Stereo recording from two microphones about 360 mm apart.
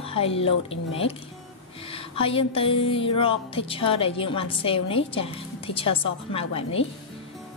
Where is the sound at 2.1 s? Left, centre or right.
Centre.